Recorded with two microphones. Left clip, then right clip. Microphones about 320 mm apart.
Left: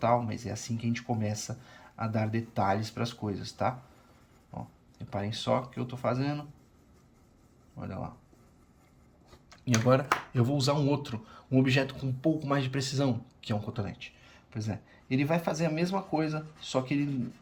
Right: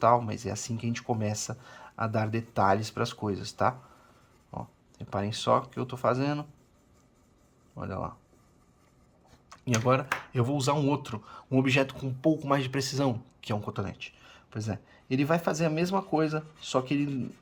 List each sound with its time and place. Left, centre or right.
0.0 s speech: centre
7.8 s speech: centre
9.5 s speech: centre